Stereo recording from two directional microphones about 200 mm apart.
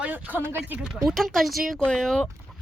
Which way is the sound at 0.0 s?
5° right (ahead or behind).